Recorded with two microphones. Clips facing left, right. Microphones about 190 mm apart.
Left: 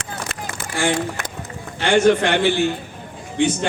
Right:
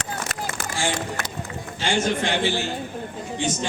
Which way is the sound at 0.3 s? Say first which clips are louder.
Right 1 dB; 40° right (ahead or behind).